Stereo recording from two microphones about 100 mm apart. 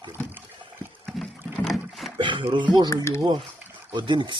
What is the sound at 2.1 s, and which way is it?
Speech, 55° right (ahead or behind).